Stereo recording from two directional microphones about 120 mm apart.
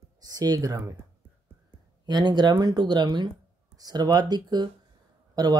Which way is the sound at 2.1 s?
35° right (ahead or behind).